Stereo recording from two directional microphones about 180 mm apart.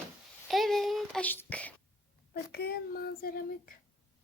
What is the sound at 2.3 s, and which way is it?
A child's voice, 60° left (ahead or behind).